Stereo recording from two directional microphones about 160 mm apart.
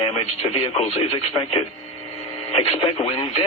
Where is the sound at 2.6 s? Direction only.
30° left (ahead or behind).